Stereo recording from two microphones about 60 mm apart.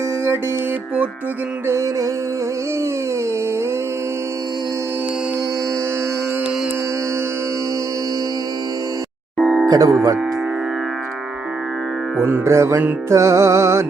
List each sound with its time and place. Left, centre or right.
1.7 s music: right
9.4 s music: centre
9.6 s speech: right
12.2 s music: right
13.1 s music: right